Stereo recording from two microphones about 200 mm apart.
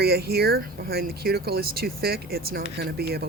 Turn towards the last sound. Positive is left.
turn(degrees=-50)  # may be behind; listen again after turning